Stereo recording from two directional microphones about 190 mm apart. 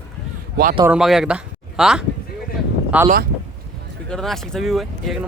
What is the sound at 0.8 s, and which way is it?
Speech, 5° right (ahead or behind).